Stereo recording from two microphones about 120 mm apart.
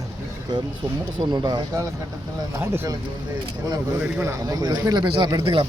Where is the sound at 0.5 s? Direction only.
35° right (ahead or behind).